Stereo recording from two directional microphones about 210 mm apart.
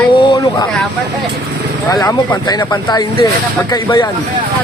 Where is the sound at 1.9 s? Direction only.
15° left (ahead or behind).